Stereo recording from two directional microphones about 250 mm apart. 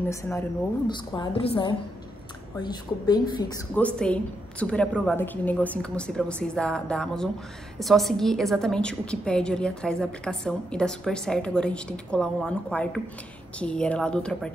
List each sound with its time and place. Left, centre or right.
0.1 s a woman's voice: centre
3.7 s a woman's voice: centre